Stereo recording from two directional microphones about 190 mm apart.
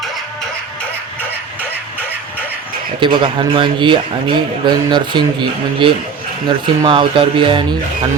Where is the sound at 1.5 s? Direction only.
10° left (ahead or behind).